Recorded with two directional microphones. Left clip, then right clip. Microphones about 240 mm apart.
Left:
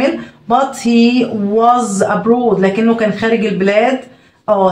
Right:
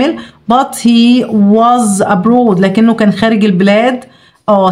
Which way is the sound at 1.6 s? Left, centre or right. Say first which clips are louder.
Even; right.